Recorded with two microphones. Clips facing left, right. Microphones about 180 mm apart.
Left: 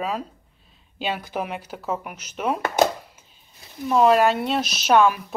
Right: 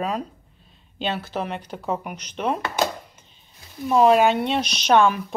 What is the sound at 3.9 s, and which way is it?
Speech, centre (ahead or behind).